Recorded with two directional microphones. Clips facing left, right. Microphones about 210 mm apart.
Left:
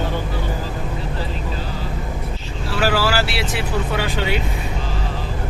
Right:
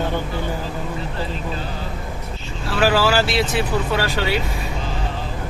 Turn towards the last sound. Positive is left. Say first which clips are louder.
# right 1 dB
turn(degrees=15)  # may be behind; listen again after turning